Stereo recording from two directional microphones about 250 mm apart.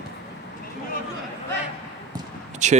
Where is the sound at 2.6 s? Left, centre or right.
Right.